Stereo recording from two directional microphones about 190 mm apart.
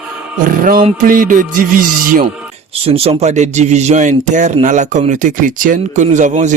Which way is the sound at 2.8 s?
30° right (ahead or behind).